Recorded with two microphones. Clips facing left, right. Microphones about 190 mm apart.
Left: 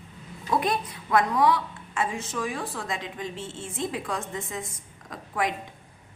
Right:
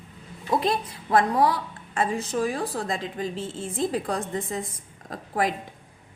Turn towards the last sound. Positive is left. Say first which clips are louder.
# right 3 dB
turn(degrees=-35)  # may be behind; listen again after turning